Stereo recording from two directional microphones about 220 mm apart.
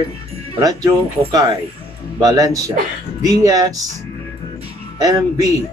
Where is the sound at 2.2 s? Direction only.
15° right (ahead or behind).